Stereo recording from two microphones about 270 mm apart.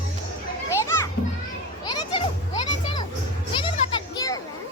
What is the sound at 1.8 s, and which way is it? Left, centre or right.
Children playing, centre.